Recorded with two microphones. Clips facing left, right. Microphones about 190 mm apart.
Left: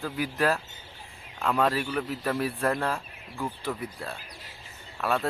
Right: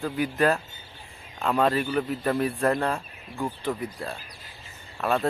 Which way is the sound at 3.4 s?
15° right (ahead or behind).